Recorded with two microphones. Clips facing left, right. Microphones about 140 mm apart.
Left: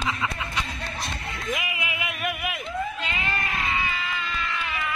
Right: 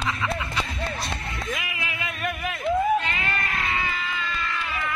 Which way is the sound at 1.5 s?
20° left (ahead or behind).